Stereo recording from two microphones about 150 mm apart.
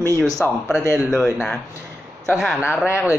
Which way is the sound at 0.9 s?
Centre (ahead or behind).